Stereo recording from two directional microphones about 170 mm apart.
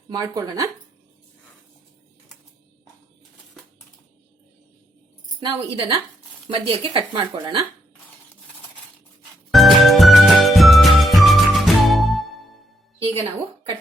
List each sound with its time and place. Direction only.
0.1 s speech: 20° right (ahead or behind)
5.4 s speech: 30° right (ahead or behind)
9.5 s music: centre (ahead or behind)